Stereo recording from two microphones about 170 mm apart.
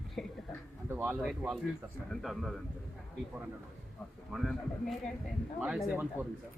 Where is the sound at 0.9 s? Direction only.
10° right (ahead or behind).